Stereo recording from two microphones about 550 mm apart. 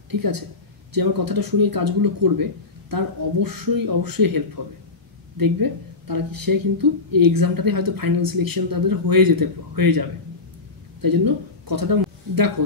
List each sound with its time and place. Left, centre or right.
0.1 s a woman's voice: right